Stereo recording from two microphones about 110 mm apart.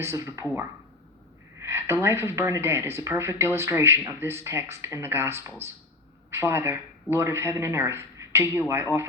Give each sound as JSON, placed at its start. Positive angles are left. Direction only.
{"t": 0.0, "sound": "speech", "side_deg": -25}
{"t": 1.5, "sound": "speech", "side_deg": -20}